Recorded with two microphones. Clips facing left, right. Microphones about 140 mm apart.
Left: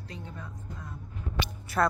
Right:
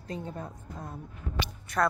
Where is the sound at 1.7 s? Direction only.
5° left (ahead or behind).